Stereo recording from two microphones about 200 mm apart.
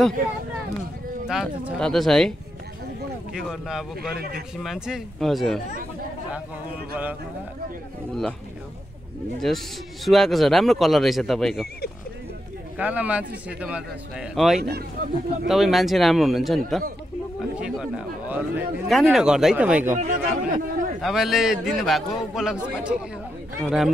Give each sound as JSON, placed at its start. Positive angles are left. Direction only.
{"t": 1.2, "sound": "a man's voice", "side_deg": -5}
{"t": 3.3, "sound": "a man's voice", "side_deg": 0}
{"t": 8.1, "sound": "a man's voice", "side_deg": 0}
{"t": 9.4, "sound": "a man's voice", "side_deg": 0}
{"t": 12.7, "sound": "a man's voice", "side_deg": -5}
{"t": 14.6, "sound": "speech", "side_deg": -50}
{"t": 15.4, "sound": "a man's voice", "side_deg": 0}
{"t": 20.0, "sound": "speech", "side_deg": -40}
{"t": 21.0, "sound": "a man's voice", "side_deg": 0}